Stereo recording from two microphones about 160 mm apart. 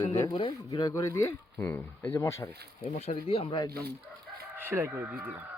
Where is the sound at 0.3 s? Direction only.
30° left (ahead or behind).